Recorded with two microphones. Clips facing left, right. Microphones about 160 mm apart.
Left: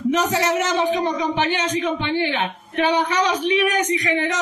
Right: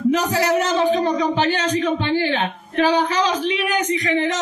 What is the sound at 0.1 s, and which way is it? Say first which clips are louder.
A woman's voice: right 1 dB; 35° right (ahead or behind).